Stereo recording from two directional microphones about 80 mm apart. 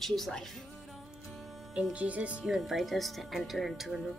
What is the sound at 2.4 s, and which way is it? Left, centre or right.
A woman's voice, centre.